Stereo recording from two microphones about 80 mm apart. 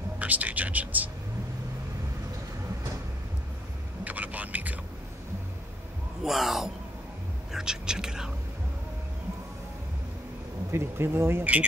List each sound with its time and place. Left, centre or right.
0.2 s speech: centre
4.0 s vehicle: centre
6.2 s speech: centre
7.5 s a sound: centre
10.7 s speech: right